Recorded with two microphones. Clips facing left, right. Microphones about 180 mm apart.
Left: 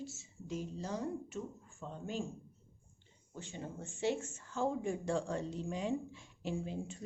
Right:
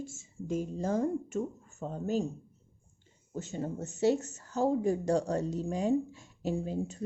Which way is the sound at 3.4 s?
40° right (ahead or behind).